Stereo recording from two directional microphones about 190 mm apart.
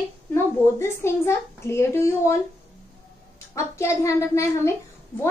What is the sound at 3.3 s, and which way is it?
A child's voice, 15° left (ahead or behind).